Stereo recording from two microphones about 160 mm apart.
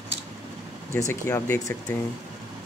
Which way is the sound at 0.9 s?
15° left (ahead or behind).